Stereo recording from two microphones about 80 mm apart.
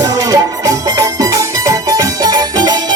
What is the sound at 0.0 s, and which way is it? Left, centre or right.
Music, right.